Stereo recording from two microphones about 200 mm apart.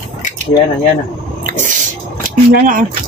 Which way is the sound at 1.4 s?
40° right (ahead or behind).